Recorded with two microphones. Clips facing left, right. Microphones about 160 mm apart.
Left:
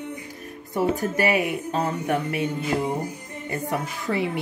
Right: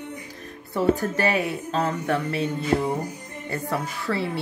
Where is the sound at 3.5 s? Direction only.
15° left (ahead or behind).